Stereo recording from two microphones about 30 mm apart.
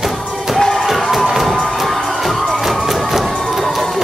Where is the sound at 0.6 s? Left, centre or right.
Centre.